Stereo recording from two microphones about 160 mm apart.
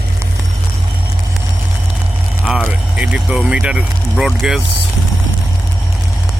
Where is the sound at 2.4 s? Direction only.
Centre (ahead or behind).